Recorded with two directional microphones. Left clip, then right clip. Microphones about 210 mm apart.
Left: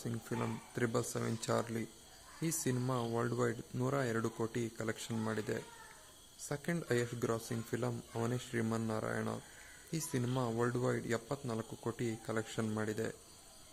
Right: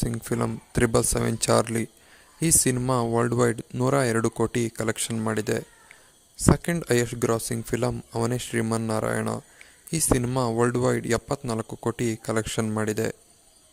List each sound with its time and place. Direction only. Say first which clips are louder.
0.0 s speech: right 12 dB; 40° right (ahead or behind)